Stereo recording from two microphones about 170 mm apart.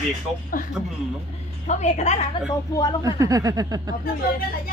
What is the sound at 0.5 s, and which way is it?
Speech, 55° left (ahead or behind).